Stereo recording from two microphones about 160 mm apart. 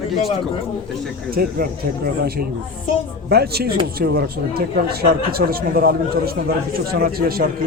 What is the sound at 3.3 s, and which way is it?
Speech, 85° right.